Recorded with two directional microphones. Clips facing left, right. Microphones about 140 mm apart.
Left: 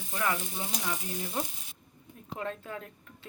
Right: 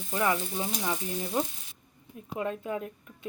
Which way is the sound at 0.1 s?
25° right (ahead or behind).